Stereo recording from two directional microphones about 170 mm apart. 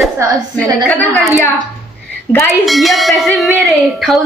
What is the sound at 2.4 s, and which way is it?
A woman's voice, centre (ahead or behind).